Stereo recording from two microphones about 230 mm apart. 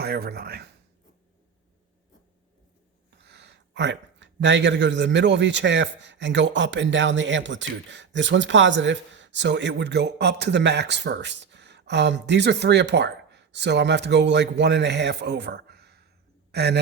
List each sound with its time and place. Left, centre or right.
0.0 s speech: right
3.2 s a man's voice: right